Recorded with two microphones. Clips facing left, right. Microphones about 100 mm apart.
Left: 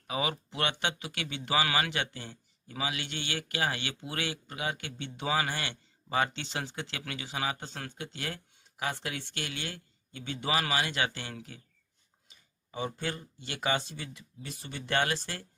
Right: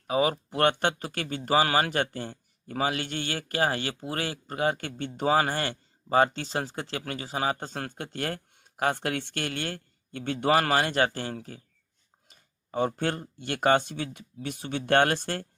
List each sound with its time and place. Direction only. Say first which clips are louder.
0.1 s speech: right 8 dB; 40° right (ahead or behind)
12.3 s speech: right 9 dB; 55° right (ahead or behind)